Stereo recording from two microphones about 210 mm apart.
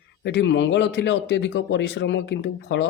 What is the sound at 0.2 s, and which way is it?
A man's voice, 55° left (ahead or behind).